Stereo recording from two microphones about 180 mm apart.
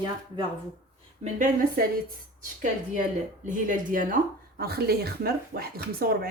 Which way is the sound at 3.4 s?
45° right (ahead or behind).